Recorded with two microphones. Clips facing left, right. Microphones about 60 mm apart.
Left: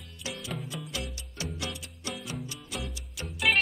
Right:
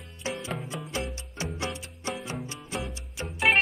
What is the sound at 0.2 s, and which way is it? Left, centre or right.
Music, right.